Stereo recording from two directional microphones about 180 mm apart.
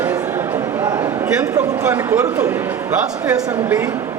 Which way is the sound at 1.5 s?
15° right (ahead or behind).